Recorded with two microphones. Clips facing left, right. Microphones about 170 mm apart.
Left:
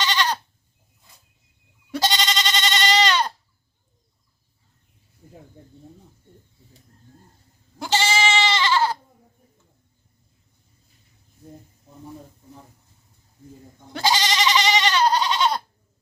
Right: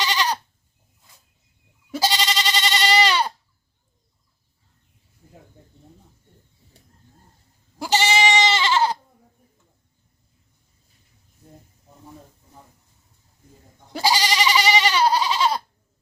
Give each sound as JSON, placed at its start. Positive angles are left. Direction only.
{"t": 0.0, "sound": "goat", "side_deg": -10}
{"t": 1.9, "sound": "goat", "side_deg": -5}
{"t": 7.8, "sound": "goat", "side_deg": -15}
{"t": 13.9, "sound": "goat", "side_deg": -10}